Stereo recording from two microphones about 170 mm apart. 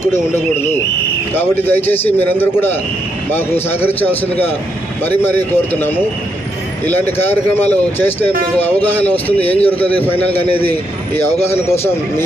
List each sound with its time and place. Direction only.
1.3 s speech: 10° left (ahead or behind)
5.2 s speech: 10° left (ahead or behind)
7.2 s speech: 10° left (ahead or behind)
10.3 s a man's voice: 35° left (ahead or behind)
10.7 s speech: 10° left (ahead or behind)